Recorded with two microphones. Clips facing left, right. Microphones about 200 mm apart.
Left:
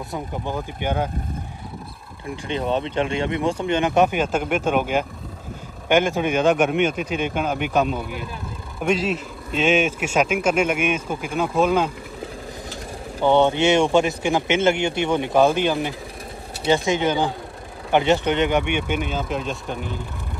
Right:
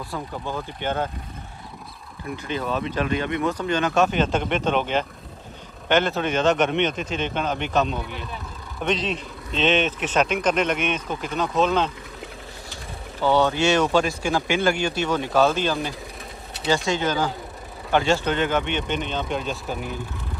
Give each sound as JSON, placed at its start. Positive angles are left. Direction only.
{"t": 0.1, "sound": "speech", "side_deg": 15}
{"t": 2.4, "sound": "speech", "side_deg": 25}
{"t": 13.2, "sound": "speech", "side_deg": 20}